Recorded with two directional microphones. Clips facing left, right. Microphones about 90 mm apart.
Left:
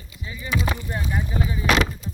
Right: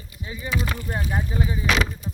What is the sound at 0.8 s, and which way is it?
Speech, 25° right (ahead or behind).